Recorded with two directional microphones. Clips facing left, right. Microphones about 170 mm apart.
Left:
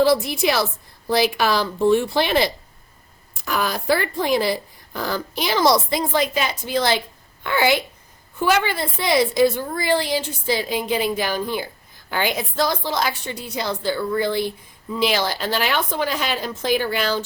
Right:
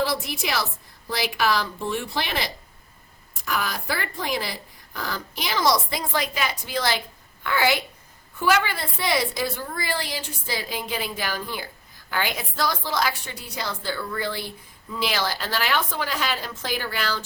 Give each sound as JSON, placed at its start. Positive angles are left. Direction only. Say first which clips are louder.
{"t": 0.0, "sound": "a woman's voice", "louder": "left 9 dB", "side_deg": 30}
{"t": 3.4, "sound": "a woman's voice", "louder": "left 5 dB", "side_deg": 30}